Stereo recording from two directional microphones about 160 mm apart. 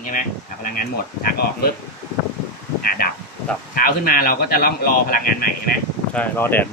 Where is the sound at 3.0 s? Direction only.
70° left (ahead or behind).